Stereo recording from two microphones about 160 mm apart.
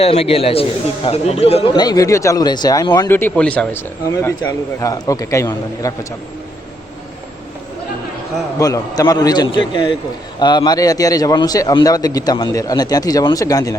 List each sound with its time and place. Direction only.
0.0 s a man's voice: 40° left (ahead or behind)
1.7 s a man's voice: 25° left (ahead or behind)
3.1 s a man's voice: 15° left (ahead or behind)
8.5 s a man's voice: 20° left (ahead or behind)